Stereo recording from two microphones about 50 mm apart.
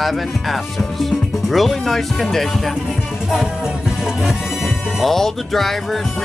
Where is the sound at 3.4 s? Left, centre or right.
Centre.